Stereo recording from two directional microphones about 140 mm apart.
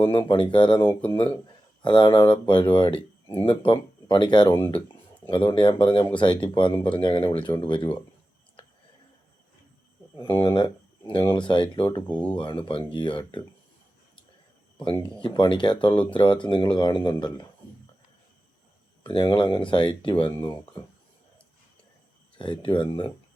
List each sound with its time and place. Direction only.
0.0 s speech: 35° left (ahead or behind)
10.3 s speech: 35° left (ahead or behind)
12.0 s speech: 10° left (ahead or behind)
12.4 s speech: 35° left (ahead or behind)
15.2 s speech: 35° left (ahead or behind)
19.0 s speech: 35° left (ahead or behind)
22.4 s speech: 35° left (ahead or behind)